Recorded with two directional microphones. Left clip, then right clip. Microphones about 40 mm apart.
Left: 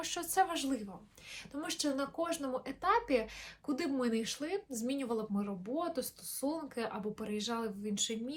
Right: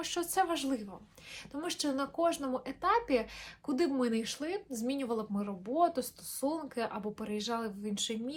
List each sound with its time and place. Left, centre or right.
0.0 s a woman's voice: right
3.7 s a woman's voice: right
5.7 s a woman's voice: right
6.7 s speech: right
7.0 s speech: centre
7.8 s speech: right